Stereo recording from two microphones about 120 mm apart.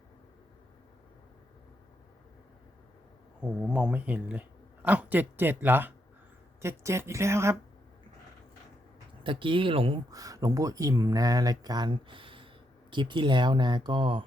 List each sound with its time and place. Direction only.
3.4 s a woman's voice: 10° right (ahead or behind)
9.2 s speech: 45° right (ahead or behind)
10.1 s speech: 30° right (ahead or behind)